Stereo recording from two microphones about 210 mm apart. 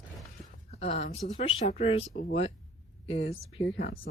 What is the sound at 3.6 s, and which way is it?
Speech, 55° left (ahead or behind).